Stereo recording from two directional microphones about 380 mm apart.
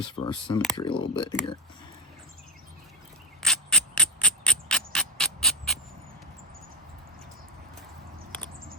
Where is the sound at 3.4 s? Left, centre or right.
Centre.